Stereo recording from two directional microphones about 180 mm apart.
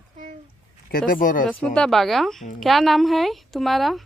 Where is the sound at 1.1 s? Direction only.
50° left (ahead or behind).